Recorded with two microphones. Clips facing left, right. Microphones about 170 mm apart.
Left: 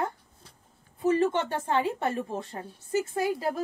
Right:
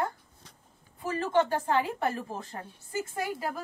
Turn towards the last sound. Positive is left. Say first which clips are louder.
# left 5 dB
turn(degrees=25)  # may be behind; listen again after turning